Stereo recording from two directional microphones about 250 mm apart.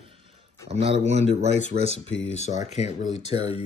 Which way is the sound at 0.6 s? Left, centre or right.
Right.